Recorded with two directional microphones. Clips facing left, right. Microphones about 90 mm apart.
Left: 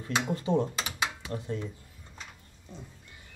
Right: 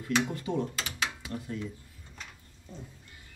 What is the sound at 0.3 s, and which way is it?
Speech, 25° left (ahead or behind).